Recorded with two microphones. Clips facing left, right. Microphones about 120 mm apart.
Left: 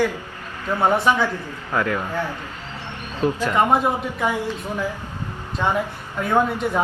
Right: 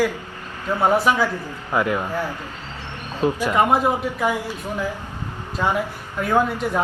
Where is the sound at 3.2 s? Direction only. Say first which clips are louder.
Right 1 dB; 15° right (ahead or behind).